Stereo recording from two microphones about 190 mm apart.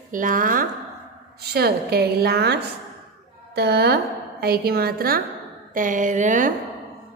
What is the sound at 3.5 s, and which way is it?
A woman's voice, 55° right (ahead or behind).